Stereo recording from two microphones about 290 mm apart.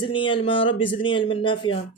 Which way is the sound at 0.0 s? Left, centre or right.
Centre.